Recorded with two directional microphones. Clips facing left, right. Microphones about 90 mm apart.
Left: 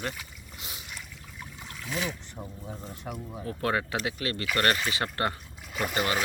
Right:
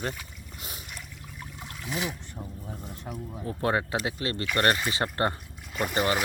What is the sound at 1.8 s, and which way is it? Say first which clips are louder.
Speech: even; 15° right (ahead or behind).